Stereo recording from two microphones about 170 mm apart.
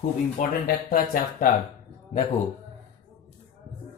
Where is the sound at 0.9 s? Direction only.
50° left (ahead or behind).